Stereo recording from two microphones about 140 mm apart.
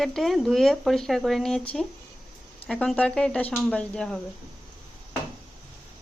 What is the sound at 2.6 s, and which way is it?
Speech, centre (ahead or behind).